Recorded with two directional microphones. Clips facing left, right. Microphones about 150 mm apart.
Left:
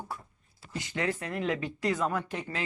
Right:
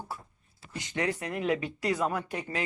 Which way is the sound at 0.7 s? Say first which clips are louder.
Right 1 dB; 20° right (ahead or behind).